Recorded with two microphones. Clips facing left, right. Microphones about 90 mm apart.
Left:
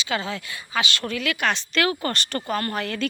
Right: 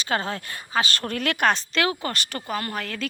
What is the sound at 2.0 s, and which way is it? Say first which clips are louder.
Speech: left 3 dB; 10° right (ahead or behind).